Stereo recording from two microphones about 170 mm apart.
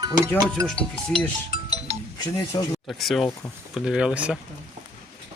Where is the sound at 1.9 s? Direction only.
35° right (ahead or behind).